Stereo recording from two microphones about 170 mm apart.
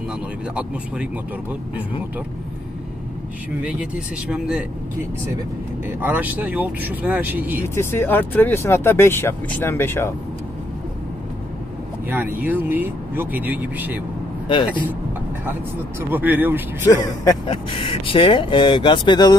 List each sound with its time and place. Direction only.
3.6 s speech: 5° right (ahead or behind)
5.9 s speech: 10° right (ahead or behind)
7.6 s speech: 15° left (ahead or behind)
12.1 s speech: 10° right (ahead or behind)
16.0 s speech: 10° right (ahead or behind)
16.8 s speech: 20° left (ahead or behind)
17.5 s speech: 30° left (ahead or behind)